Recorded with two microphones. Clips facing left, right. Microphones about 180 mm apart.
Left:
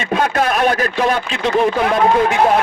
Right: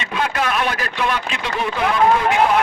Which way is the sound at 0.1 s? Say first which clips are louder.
Left 5 dB; 40° left (ahead or behind).